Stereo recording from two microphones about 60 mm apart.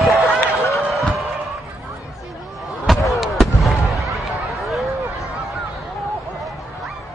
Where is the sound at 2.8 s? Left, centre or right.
Centre.